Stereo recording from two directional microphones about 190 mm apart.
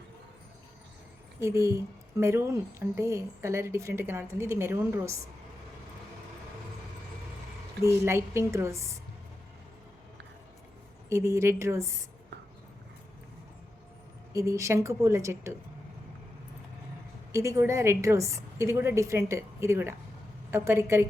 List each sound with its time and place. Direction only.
1.4 s a woman's voice: 15° right (ahead or behind)
7.9 s a woman's voice: 15° right (ahead or behind)
11.1 s a woman's voice: 15° right (ahead or behind)
14.3 s a woman's voice: 15° right (ahead or behind)
17.3 s a woman's voice: 15° right (ahead or behind)